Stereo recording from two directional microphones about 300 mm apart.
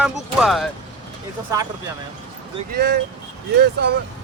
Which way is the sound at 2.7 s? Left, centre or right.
Right.